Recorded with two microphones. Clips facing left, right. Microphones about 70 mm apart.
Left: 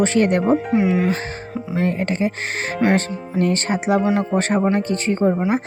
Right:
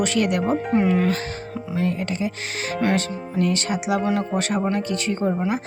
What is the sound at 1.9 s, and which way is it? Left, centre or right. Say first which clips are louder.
Speech: left 6 dB; left.